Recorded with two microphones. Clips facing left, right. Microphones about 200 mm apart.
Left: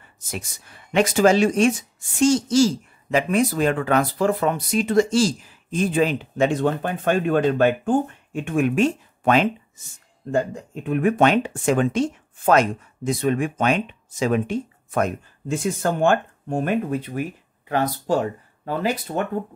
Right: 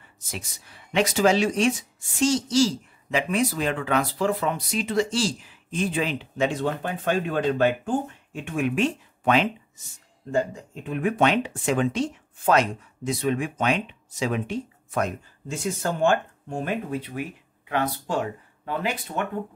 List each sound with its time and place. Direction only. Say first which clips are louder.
0.3 s speech: left 4 dB; 50° left (ahead or behind)